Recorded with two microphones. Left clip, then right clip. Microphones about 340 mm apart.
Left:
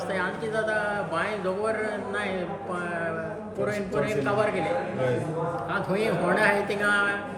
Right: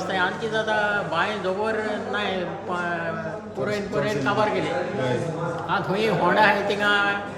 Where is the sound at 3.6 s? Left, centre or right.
Centre.